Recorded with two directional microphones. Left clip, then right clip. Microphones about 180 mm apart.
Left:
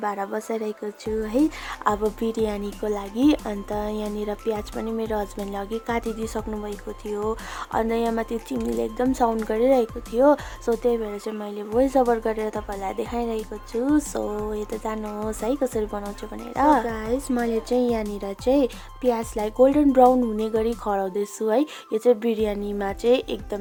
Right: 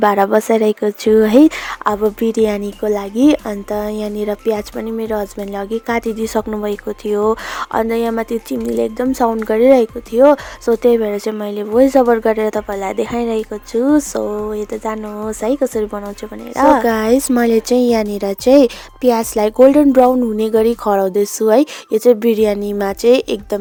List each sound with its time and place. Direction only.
0.0 s speech: 45° right (ahead or behind)
1.8 s speech: 25° right (ahead or behind)
16.8 s speech: 45° right (ahead or behind)